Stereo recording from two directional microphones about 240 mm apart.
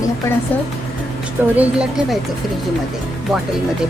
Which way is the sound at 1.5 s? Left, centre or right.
Centre.